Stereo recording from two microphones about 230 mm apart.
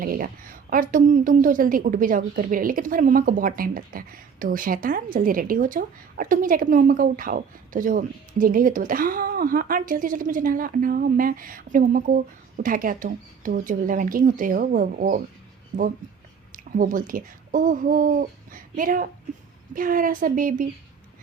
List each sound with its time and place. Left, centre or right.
0.0 s a woman's voice: right
16.5 s a sound: right
17.1 s a woman's voice: right